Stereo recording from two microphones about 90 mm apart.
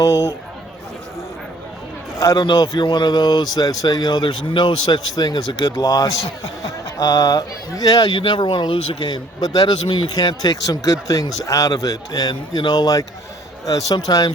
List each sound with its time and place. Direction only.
0.0 s speech: 40° left (ahead or behind)
2.2 s a man's voice: 50° left (ahead or behind)
5.7 s speech: 45° left (ahead or behind)
8.1 s speech: 65° left (ahead or behind); by 14.3 s 45° left (ahead or behind)